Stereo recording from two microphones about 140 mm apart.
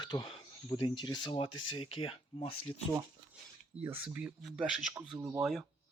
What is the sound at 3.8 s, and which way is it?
Speech, 15° right (ahead or behind).